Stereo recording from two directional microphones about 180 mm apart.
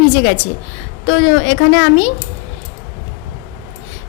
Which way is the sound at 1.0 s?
90° left.